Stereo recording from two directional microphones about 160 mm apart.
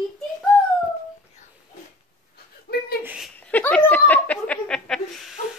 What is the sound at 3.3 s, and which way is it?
Laughter, 10° left (ahead or behind).